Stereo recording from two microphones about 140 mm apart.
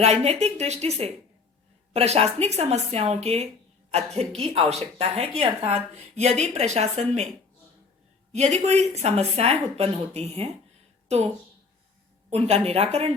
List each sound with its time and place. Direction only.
0.0 s speech: 50° right (ahead or behind)
8.3 s speech: 55° right (ahead or behind)
12.3 s speech: 50° right (ahead or behind)